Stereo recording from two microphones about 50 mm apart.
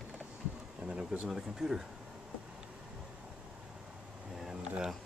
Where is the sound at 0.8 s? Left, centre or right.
Right.